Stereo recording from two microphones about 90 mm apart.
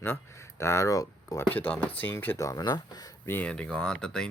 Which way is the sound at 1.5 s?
20° left (ahead or behind).